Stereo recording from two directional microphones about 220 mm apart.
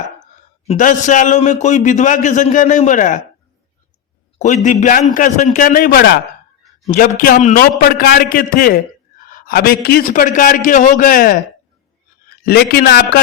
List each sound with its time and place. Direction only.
0.7 s a man's voice: 35° left (ahead or behind)
4.4 s a man's voice: 35° left (ahead or behind)
7.2 s a man's voice: 35° left (ahead or behind)
12.5 s a man's voice: 45° left (ahead or behind)